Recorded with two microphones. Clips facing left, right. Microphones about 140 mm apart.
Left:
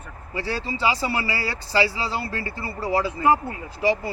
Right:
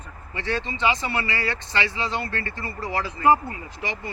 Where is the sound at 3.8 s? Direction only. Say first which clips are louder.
Left 10 dB; 30° left (ahead or behind).